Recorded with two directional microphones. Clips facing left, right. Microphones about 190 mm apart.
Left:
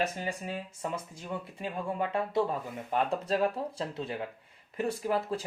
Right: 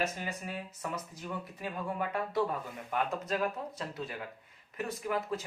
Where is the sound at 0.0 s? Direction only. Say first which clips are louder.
Left 3 dB; 30° left (ahead or behind).